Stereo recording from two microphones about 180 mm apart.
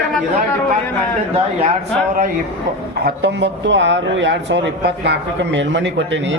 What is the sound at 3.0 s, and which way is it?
Speech, 75° right (ahead or behind).